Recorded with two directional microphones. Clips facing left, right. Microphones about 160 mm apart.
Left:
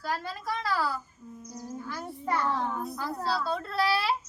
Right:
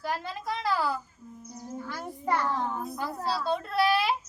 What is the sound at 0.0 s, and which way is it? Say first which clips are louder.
Speech: right 1 dB; 20° right (ahead or behind).